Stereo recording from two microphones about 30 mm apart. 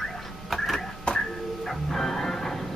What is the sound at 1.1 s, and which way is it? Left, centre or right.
Music, centre.